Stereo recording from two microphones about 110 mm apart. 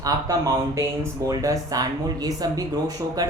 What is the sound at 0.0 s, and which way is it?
Speech, 30° right (ahead or behind).